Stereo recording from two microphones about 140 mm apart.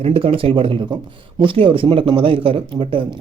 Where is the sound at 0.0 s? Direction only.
40° right (ahead or behind).